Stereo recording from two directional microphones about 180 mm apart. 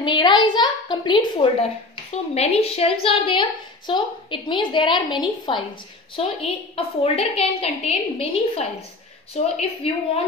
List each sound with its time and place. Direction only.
0.0 s a woman's voice: 25° left (ahead or behind)